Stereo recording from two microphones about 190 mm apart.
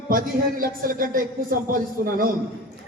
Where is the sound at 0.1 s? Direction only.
50° right (ahead or behind).